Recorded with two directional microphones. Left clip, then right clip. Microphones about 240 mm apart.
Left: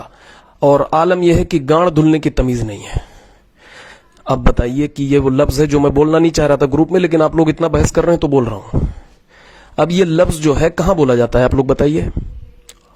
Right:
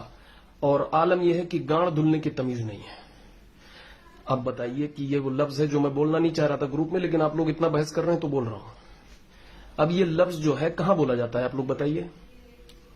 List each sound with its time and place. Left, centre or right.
0.6 s a man's voice: left
4.3 s a man's voice: left
9.7 s a man's voice: left